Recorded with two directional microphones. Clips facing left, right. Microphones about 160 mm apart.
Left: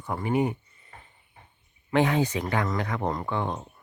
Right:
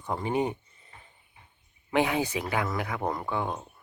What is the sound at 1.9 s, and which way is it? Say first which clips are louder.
Speech: left 3 dB; 10° right (ahead or behind).